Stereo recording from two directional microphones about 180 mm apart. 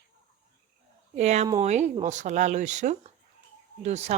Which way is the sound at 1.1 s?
35° right (ahead or behind).